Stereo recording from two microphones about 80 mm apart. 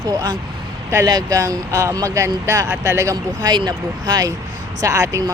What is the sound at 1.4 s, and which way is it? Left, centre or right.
Speech, right.